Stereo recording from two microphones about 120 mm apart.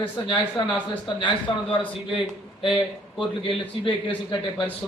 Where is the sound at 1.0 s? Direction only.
45° left (ahead or behind).